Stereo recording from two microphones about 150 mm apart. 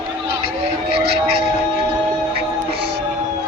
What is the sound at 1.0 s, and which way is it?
Music, 90° right.